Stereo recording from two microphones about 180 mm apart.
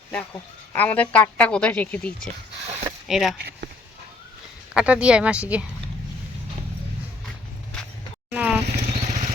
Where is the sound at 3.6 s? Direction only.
75° right (ahead or behind).